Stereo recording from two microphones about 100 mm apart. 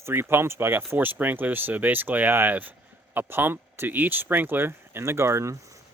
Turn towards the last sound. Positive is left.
turn(degrees=-30)  # may be behind; listen again after turning